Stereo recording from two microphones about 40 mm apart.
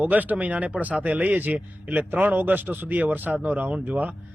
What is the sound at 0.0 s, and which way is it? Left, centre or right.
A man's voice, right.